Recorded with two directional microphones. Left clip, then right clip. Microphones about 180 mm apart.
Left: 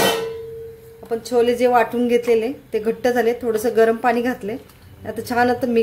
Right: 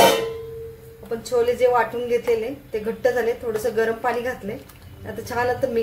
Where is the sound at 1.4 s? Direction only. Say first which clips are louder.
Left 3 dB; 60° left (ahead or behind).